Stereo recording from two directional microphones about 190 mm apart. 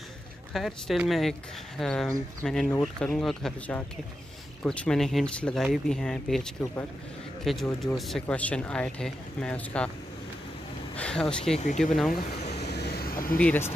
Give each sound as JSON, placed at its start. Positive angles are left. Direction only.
{"t": 0.5, "sound": "speech", "side_deg": 0}
{"t": 11.0, "sound": "speech", "side_deg": 5}
{"t": 11.5, "sound": "speech", "side_deg": 40}
{"t": 11.8, "sound": "speech", "side_deg": 0}
{"t": 12.5, "sound": "vehicle", "side_deg": 60}
{"t": 13.4, "sound": "speech", "side_deg": 10}